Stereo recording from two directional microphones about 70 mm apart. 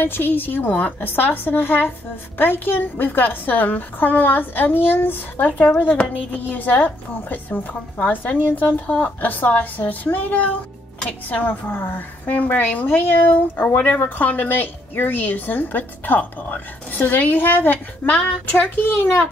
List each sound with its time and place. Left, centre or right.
0.0 s a woman's voice: left
5.5 s a woman's voice: centre; by 19.2 s left